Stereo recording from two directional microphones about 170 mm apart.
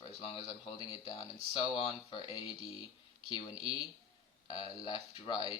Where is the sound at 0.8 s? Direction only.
25° left (ahead or behind).